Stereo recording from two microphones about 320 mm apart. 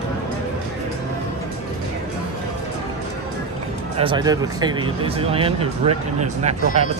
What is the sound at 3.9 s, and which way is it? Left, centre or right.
Speech, centre.